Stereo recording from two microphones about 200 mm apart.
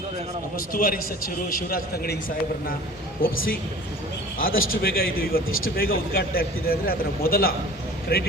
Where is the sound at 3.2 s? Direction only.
45° left (ahead or behind).